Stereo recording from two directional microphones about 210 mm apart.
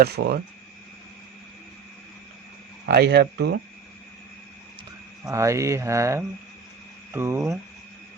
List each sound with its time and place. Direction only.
0.0 s speech: 50° right (ahead or behind)
2.8 s speech: 50° right (ahead or behind)
5.2 s speech: 15° right (ahead or behind)